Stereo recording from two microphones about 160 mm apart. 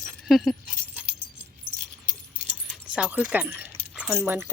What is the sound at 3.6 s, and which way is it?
Keys jangling, 5° right (ahead or behind).